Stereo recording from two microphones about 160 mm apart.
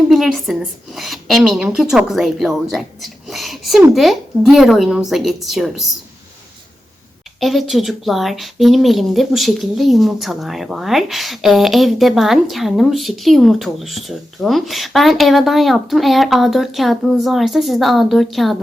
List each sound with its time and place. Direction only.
0.1 s speech: centre (ahead or behind)
7.3 s speech: centre (ahead or behind)